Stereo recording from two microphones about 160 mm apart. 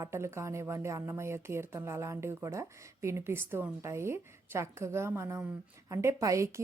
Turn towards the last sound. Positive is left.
turn(degrees=-20)  # may be behind; listen again after turning